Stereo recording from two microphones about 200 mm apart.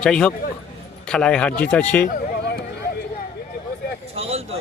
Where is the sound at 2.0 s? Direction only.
50° left (ahead or behind).